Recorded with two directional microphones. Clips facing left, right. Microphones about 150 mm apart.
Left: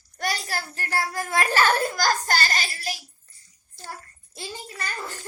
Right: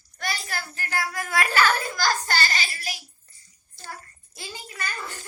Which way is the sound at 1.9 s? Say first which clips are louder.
Left 2 dB; 45° left (ahead or behind).